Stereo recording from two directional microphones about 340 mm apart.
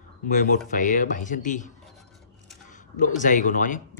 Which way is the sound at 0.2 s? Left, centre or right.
Left.